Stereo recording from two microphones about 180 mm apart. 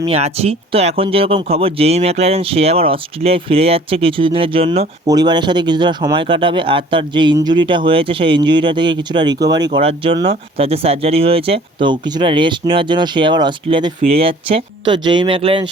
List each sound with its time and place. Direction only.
0.1 s speech: 35° right (ahead or behind)
5.0 s speech: 25° right (ahead or behind)